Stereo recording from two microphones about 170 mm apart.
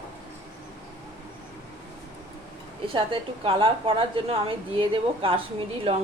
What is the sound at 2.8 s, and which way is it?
A woman's voice, 30° right (ahead or behind).